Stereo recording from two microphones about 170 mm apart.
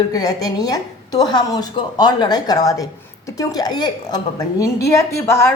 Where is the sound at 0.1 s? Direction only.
20° left (ahead or behind).